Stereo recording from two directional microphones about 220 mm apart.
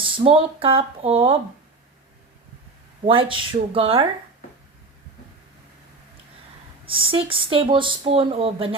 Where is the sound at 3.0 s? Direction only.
25° right (ahead or behind).